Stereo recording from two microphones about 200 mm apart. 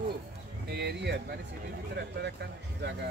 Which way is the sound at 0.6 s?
55° right (ahead or behind).